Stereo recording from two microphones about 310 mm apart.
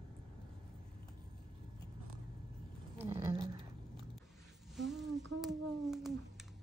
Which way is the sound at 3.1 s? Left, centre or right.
Centre.